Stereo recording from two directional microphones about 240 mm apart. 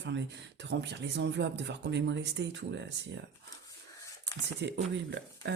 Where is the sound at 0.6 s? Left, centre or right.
Right.